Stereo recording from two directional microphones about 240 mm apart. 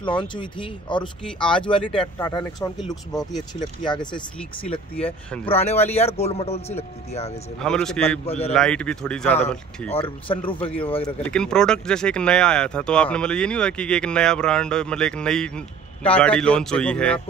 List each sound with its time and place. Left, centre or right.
0.0 s speech: centre
1.2 s speech: centre
2.2 s speech: centre
3.9 s speech: centre
5.5 s speech: left
7.5 s speech: centre
8.3 s speech: left
8.5 s speech: centre
10.2 s speech: left
11.2 s speech: centre